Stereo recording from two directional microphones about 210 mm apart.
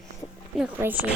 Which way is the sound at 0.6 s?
10° right (ahead or behind).